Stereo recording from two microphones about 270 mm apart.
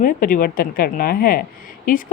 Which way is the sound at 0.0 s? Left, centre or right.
Left.